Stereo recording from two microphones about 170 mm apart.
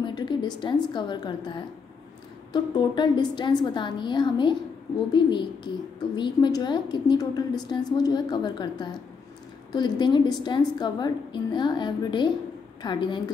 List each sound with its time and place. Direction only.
0.0 s a woman's voice: 25° left (ahead or behind)